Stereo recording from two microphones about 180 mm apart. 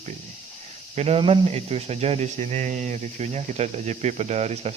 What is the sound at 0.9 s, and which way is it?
Speech, 35° right (ahead or behind).